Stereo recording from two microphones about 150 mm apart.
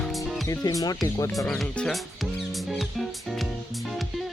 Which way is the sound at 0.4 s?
20° left (ahead or behind).